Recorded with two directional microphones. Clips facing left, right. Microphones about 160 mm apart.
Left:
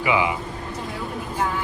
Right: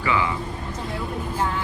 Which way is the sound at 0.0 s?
15° left (ahead or behind).